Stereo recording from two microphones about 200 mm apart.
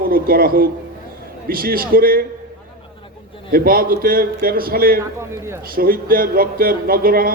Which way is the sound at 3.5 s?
45° right (ahead or behind).